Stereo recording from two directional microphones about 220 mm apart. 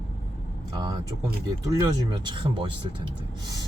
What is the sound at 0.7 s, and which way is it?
Speech, 20° right (ahead or behind).